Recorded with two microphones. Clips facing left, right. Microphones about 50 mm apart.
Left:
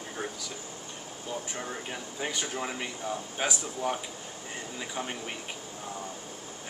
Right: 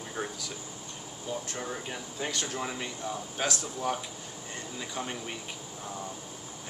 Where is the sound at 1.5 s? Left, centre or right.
Centre.